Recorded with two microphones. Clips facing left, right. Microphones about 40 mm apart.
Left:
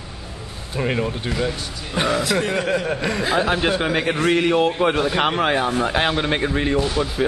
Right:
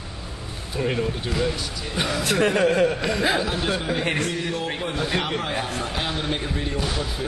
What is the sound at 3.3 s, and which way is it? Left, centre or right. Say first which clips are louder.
Speech: left 5 dB; left.